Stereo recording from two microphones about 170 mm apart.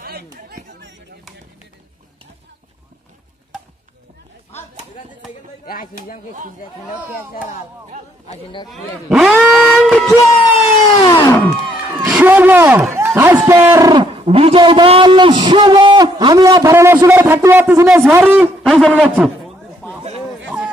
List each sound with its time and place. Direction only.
0.0 s chatter: 70° right (ahead or behind)
8.6 s speech: centre (ahead or behind)
11.1 s music: 10° left (ahead or behind)
11.7 s crowd: 5° right (ahead or behind)
12.1 s a sound: 10° right (ahead or behind)
12.9 s a man's voice: 15° right (ahead or behind)
18.7 s a man's voice: centre (ahead or behind)
20.4 s a sound: 5° right (ahead or behind)